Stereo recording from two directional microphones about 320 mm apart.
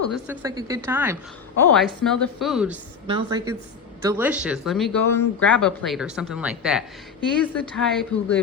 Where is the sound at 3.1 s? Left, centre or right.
Centre.